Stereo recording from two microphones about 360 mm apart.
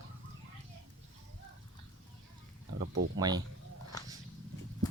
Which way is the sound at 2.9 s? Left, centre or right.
Right.